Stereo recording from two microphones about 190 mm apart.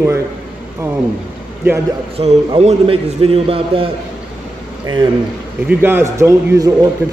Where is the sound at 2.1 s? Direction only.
30° right (ahead or behind).